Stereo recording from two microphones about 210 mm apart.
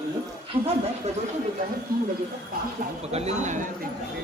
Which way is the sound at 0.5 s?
25° right (ahead or behind).